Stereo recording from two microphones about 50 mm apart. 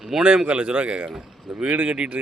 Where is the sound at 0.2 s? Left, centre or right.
Right.